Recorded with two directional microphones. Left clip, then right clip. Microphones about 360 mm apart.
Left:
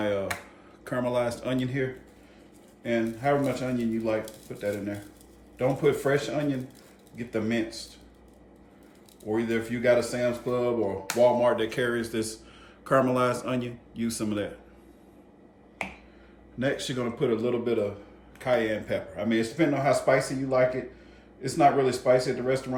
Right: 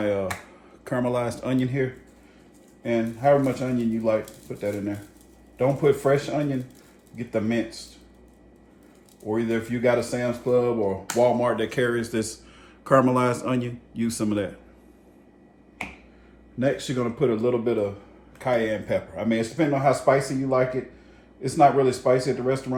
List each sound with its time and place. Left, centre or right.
0.9 s speech: centre
2.8 s speech: centre
9.3 s speech: centre
16.6 s speech: centre